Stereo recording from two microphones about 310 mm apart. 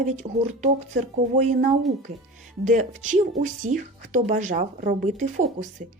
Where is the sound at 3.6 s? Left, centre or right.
Right.